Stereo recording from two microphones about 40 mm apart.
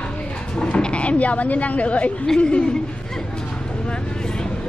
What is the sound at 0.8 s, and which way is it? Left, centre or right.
Frog, left.